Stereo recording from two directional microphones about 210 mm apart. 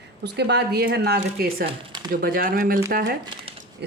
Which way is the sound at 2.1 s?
45° right (ahead or behind).